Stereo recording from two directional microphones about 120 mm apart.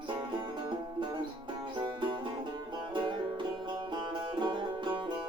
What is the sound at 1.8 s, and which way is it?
Music, 40° right (ahead or behind).